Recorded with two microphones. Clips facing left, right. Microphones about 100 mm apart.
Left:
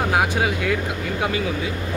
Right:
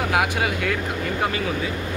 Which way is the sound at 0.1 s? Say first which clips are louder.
Left 1 dB; 25° left (ahead or behind).